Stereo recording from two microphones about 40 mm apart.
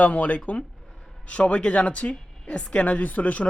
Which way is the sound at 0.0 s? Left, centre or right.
Left.